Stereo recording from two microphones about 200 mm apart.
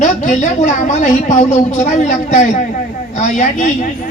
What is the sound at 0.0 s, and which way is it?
A woman's voice, 35° left (ahead or behind).